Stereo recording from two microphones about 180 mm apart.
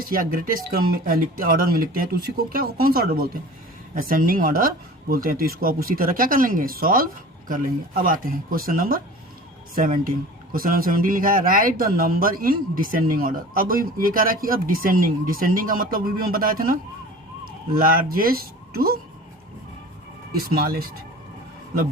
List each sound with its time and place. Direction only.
0.0 s speech: 50° right (ahead or behind)
17.7 s speech: 55° right (ahead or behind)
20.4 s speech: 55° right (ahead or behind)